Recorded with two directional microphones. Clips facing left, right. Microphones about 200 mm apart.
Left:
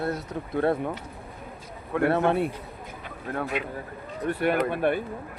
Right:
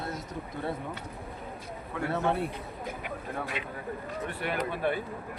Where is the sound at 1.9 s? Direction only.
65° left (ahead or behind).